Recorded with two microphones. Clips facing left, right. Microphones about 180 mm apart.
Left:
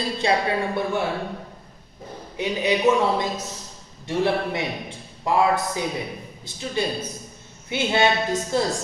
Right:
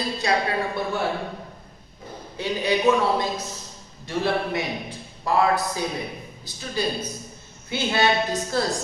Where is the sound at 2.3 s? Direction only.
20° left (ahead or behind).